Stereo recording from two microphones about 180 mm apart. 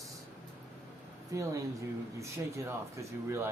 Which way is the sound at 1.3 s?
20° right (ahead or behind).